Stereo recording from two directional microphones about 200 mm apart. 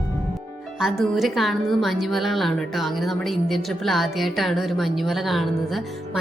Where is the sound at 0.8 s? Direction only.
Centre (ahead or behind).